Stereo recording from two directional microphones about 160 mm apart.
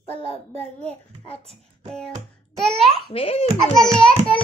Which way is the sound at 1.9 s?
5° left (ahead or behind).